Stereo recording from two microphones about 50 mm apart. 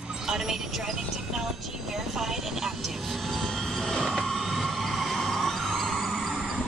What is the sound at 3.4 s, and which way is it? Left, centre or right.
Train, centre.